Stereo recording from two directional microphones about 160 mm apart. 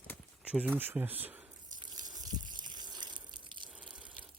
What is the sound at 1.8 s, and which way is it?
Water, 25° right (ahead or behind).